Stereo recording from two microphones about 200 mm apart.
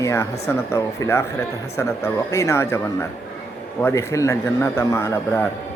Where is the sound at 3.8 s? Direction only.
15° left (ahead or behind).